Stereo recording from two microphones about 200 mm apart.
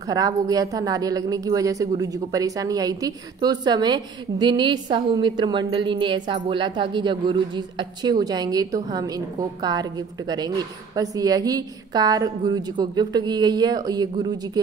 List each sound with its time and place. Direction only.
0.1 s a woman's voice: 20° right (ahead or behind)